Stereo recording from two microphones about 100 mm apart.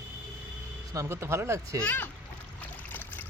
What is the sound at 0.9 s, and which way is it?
Speech, 25° right (ahead or behind).